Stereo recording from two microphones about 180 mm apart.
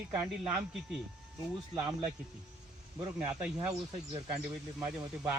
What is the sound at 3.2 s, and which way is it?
Speech, 5° right (ahead or behind).